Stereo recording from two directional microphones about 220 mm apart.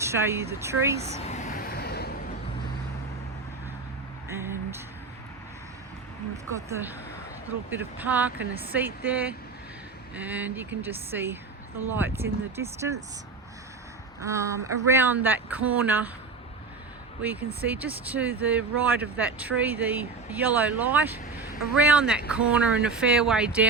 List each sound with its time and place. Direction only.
0.0 s speech: 10° right (ahead or behind)
1.2 s vehicle: 30° left (ahead or behind)
4.3 s a sound: 10° right (ahead or behind)
7.7 s speech: 10° right (ahead or behind)
14.2 s speech: 15° right (ahead or behind)
17.7 s speech: 5° right (ahead or behind)